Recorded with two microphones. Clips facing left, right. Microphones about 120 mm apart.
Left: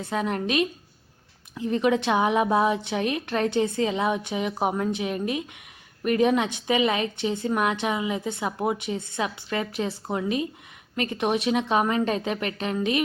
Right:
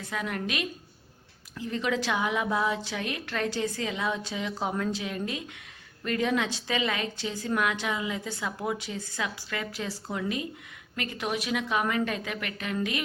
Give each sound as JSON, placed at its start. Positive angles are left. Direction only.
{"t": 0.0, "sound": "a woman's voice", "side_deg": 25}